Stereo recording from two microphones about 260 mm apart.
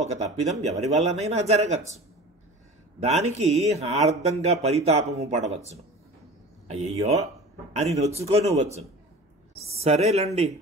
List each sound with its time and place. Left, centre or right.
0.0 s speech: right
3.0 s speech: right
6.7 s speech: right